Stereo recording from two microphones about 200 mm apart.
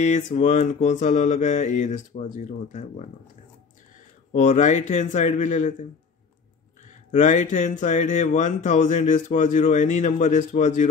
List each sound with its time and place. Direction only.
0.0 s speech: 35° left (ahead or behind)
4.3 s speech: 40° left (ahead or behind)
6.9 s speech: 40° left (ahead or behind)